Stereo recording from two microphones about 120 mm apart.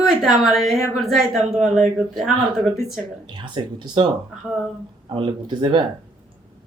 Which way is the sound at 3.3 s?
40° right (ahead or behind).